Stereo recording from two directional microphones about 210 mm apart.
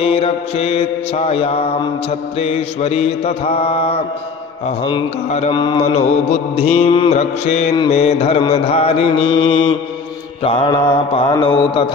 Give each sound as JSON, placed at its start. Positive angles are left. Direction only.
{"t": 0.0, "sound": "mantra", "side_deg": 30}